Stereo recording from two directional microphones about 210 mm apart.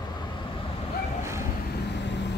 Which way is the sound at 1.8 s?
55° left (ahead or behind).